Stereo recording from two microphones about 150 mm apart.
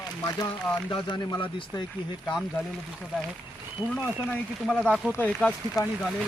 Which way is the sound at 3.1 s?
5° right (ahead or behind).